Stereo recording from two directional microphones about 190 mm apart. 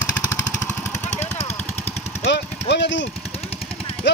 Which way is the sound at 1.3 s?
35° left (ahead or behind).